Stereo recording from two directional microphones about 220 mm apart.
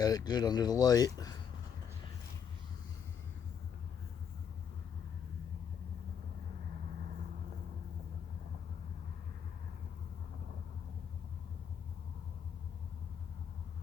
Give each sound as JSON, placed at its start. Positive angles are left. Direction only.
{"t": 0.0, "sound": "speech", "side_deg": 15}